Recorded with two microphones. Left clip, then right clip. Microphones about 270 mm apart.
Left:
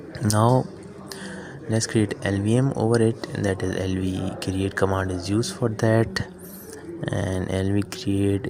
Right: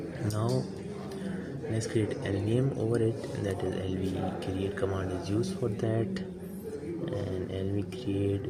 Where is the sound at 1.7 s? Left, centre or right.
Left.